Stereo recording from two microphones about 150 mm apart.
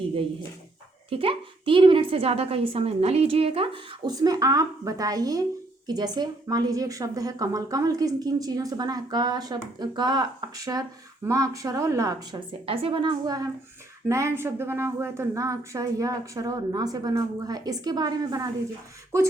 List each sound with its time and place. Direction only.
1.1 s a woman's voice: 35° right (ahead or behind)
4.1 s a woman's voice: 25° right (ahead or behind)
11.3 s a woman's voice: 20° right (ahead or behind)
12.5 s a woman's voice: 35° right (ahead or behind)